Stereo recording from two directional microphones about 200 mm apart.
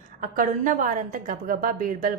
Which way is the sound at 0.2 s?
40° right (ahead or behind).